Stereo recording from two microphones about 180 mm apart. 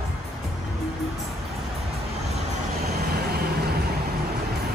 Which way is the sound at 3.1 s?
60° right (ahead or behind).